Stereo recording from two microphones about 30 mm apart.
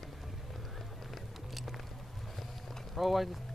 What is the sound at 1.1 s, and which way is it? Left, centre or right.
Music, centre.